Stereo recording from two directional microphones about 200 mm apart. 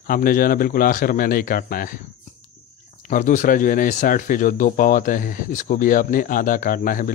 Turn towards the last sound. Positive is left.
turn(degrees=45)  # may be behind; listen again after turning